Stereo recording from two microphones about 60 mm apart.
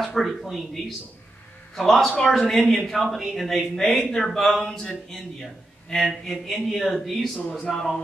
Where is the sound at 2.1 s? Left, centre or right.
Centre.